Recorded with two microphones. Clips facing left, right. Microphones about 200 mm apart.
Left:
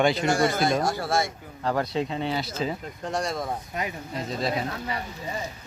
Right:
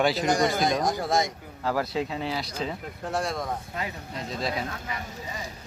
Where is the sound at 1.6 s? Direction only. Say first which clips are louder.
Left 1 dB; 5° right (ahead or behind).